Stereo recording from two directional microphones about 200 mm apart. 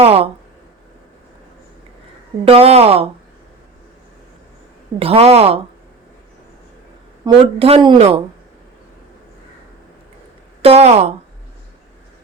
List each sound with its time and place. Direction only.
0.0 s speech: 30° right (ahead or behind)
2.4 s a woman's voice: 30° right (ahead or behind)
4.9 s a woman's voice: 30° right (ahead or behind)
7.3 s speech: 25° right (ahead or behind)
10.6 s a woman's voice: 30° right (ahead or behind)